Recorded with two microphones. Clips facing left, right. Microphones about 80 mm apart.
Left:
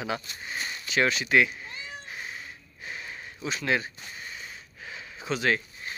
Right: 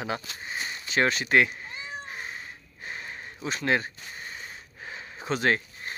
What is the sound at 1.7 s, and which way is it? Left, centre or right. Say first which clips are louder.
Cat: right 2 dB; right.